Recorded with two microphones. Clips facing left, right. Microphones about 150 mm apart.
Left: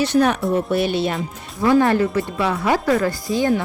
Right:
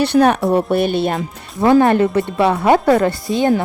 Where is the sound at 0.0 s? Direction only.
60° right (ahead or behind).